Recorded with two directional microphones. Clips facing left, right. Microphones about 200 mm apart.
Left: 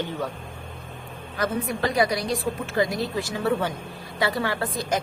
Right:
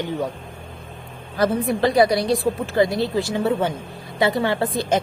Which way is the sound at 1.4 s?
30° right (ahead or behind).